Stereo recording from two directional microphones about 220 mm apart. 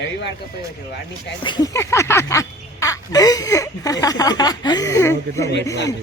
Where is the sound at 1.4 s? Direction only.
20° left (ahead or behind).